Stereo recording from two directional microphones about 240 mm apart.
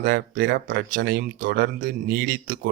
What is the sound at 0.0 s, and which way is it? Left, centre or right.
Speech, right.